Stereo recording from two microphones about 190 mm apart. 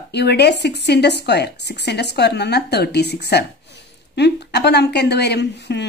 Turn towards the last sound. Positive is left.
turn(degrees=60)  # may be behind; listen again after turning